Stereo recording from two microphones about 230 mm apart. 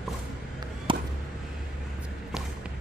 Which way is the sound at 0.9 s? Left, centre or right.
Right.